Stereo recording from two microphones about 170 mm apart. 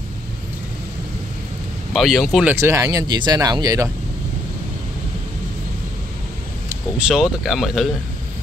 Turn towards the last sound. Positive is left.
turn(degrees=0)  # may be behind; listen again after turning